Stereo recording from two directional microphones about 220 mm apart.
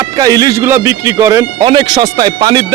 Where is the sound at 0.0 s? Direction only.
15° right (ahead or behind).